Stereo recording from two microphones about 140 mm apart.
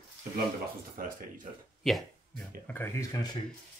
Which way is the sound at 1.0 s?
85° right.